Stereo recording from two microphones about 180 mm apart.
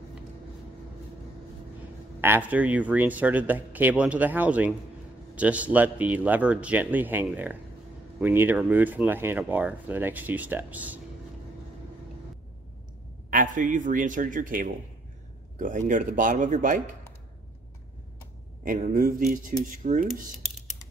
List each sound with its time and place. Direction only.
2.2 s speech: 10° right (ahead or behind)
13.3 s speech: 45° right (ahead or behind)
18.6 s speech: 50° right (ahead or behind)